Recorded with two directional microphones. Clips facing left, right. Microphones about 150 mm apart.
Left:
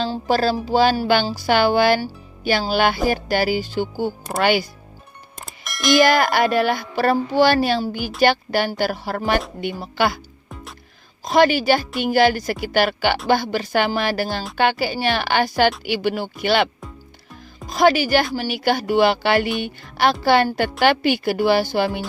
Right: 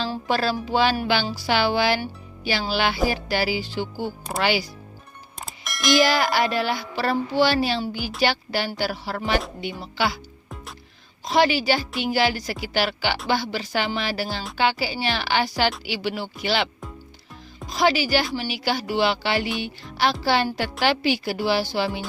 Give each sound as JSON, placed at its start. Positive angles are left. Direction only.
{"t": 0.0, "sound": "speech", "side_deg": 35}
{"t": 5.4, "sound": "a sound", "side_deg": 0}
{"t": 6.0, "sound": "speech", "side_deg": 50}
{"t": 10.5, "sound": "music", "side_deg": 0}
{"t": 11.3, "sound": "speech", "side_deg": 50}
{"t": 17.7, "sound": "speech", "side_deg": 50}